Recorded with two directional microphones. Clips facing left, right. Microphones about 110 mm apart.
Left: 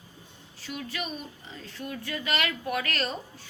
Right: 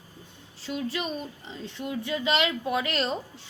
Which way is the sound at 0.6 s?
25° right (ahead or behind).